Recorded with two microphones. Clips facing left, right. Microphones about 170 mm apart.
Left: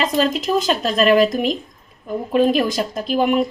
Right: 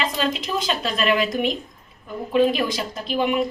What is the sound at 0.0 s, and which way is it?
Speech, 40° left (ahead or behind).